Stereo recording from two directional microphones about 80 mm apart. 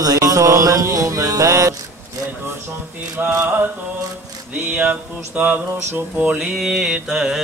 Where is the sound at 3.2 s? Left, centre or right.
Right.